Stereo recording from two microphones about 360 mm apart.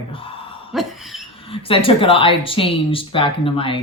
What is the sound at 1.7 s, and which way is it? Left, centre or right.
Speech, centre.